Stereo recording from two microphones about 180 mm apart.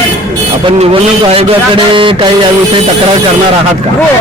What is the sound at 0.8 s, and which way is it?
Speech, 30° right (ahead or behind).